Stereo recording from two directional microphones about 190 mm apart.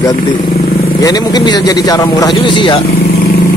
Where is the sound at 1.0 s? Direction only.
20° left (ahead or behind).